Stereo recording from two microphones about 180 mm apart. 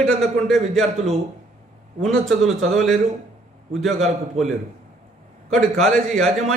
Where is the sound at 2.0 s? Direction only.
Centre (ahead or behind).